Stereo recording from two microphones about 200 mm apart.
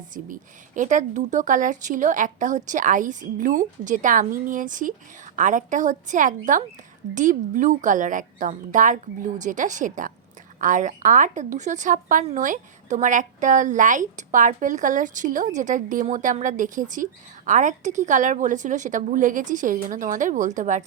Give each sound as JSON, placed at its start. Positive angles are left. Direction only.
{"t": 0.1, "sound": "a woman's voice", "side_deg": -40}